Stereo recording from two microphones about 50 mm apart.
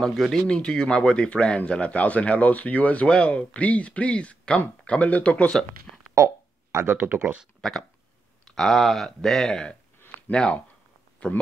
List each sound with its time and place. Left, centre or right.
0.3 s speech: centre
6.1 s a sound: right
7.6 s speech: centre
10.3 s speech: centre